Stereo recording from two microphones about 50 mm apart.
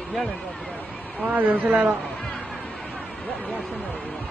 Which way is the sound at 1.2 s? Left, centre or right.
Right.